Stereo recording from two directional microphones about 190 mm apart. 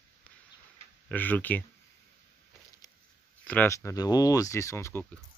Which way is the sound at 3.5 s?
10° left (ahead or behind).